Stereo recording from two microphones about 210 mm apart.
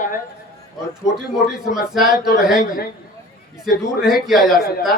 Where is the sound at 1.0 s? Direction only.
Centre (ahead or behind).